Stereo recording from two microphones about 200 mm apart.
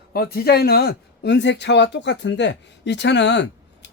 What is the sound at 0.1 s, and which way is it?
A man's voice, 50° left (ahead or behind).